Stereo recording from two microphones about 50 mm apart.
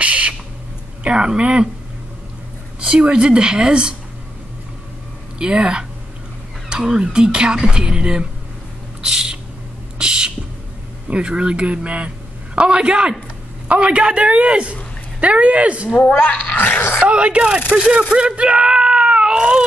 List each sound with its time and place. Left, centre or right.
0.0 s owl: right
1.0 s speech: centre
2.8 s speech: right
5.4 s speech: centre
9.0 s a sound: centre
11.1 s speech: right
15.9 s speech: left
16.3 s a sound: left
17.0 s speech: right
18.1 s screaming: right